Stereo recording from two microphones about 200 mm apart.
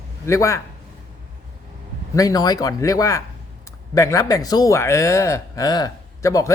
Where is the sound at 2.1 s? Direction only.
20° left (ahead or behind).